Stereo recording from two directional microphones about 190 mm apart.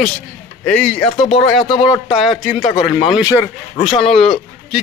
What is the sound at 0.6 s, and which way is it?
Speech, 5° left (ahead or behind).